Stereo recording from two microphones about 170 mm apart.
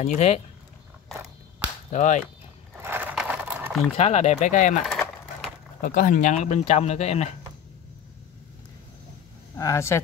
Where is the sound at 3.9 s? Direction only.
40° left (ahead or behind).